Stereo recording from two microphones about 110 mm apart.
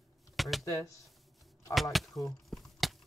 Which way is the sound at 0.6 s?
30° left (ahead or behind).